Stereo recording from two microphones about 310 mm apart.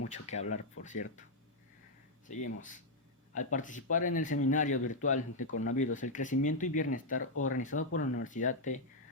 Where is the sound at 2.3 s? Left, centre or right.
Left.